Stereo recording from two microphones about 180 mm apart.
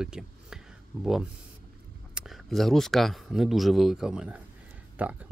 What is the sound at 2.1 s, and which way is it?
Speech, centre (ahead or behind).